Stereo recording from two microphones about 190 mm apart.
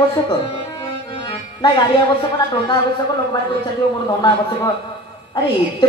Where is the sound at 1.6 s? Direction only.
25° left (ahead or behind).